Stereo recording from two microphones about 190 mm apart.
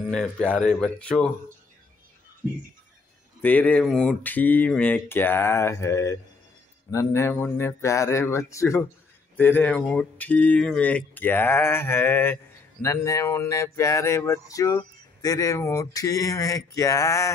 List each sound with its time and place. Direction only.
0.1 s speech: 5° left (ahead or behind)
3.4 s speech: 10° left (ahead or behind)